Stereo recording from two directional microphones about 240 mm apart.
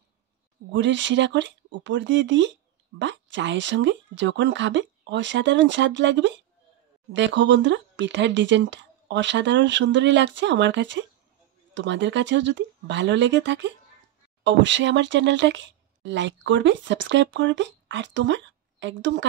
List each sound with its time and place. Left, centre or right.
0.7 s speech: right